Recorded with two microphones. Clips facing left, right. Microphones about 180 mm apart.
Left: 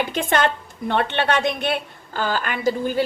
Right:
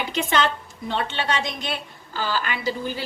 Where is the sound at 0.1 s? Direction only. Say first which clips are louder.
Left 2 dB; 50° left (ahead or behind).